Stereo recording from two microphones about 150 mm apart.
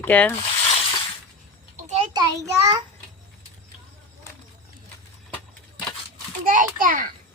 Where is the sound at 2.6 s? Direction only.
25° right (ahead or behind).